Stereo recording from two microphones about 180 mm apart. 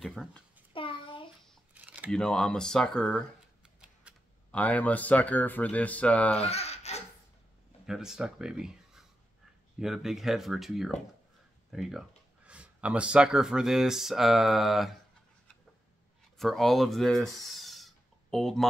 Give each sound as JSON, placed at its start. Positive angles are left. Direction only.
{"t": 0.0, "sound": "a child's voice", "side_deg": 0}
{"t": 0.7, "sound": "a sound", "side_deg": 30}
{"t": 1.7, "sound": "a sound", "side_deg": -10}
{"t": 2.0, "sound": "speech", "side_deg": 5}
{"t": 4.1, "sound": "computer keyboard", "side_deg": -5}
{"t": 4.5, "sound": "speech", "side_deg": 10}
{"t": 6.4, "sound": "a sound", "side_deg": 35}
{"t": 7.8, "sound": "speech", "side_deg": -5}
{"t": 16.3, "sound": "speech", "side_deg": 0}